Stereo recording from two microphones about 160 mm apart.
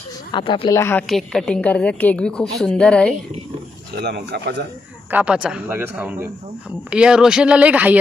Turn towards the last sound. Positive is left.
turn(degrees=-10)  # may be behind; listen again after turning